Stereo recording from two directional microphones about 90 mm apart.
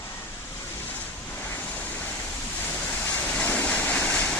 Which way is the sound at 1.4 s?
20° left (ahead or behind).